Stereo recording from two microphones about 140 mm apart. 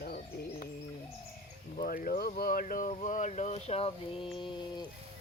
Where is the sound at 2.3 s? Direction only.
90° left; by 4.7 s 35° left (ahead or behind).